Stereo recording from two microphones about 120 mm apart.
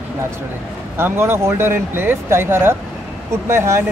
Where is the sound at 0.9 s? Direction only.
20° right (ahead or behind).